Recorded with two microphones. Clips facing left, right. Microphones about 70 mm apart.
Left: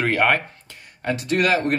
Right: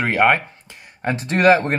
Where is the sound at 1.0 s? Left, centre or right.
Right.